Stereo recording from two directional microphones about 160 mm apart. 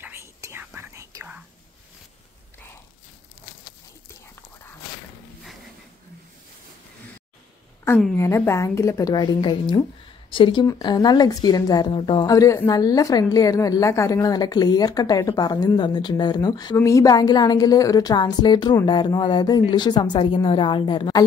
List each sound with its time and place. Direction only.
0.0 s whispering: 15° right (ahead or behind)
8.2 s speech: 15° left (ahead or behind)